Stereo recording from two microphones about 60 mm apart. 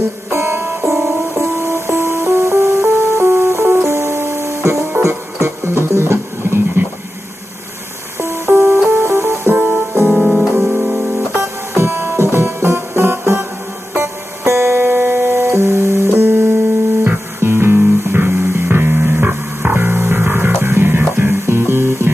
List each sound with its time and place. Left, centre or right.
0.3 s music: right
8.2 s music: right
9.6 s music: right
10.1 s piano: centre
10.7 s music: centre
11.7 s music: right